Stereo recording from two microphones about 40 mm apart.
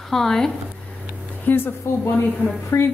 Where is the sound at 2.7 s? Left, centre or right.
Left.